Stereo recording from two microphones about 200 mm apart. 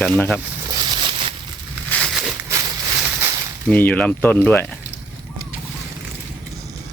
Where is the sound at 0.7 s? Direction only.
25° right (ahead or behind).